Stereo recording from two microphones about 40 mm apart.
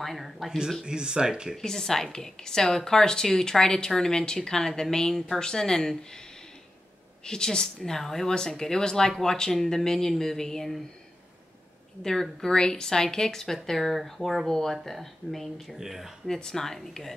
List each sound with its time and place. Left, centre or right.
0.0 s speech: centre
0.8 s speech: right
1.6 s a woman's voice: centre
7.2 s a woman's voice: centre
12.0 s a woman's voice: centre
15.7 s speech: centre
16.3 s a woman's voice: centre